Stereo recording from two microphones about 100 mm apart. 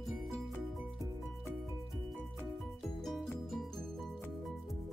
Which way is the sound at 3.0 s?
Centre (ahead or behind).